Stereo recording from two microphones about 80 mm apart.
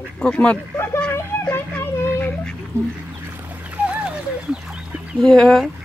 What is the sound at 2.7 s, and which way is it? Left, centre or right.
Speech, right.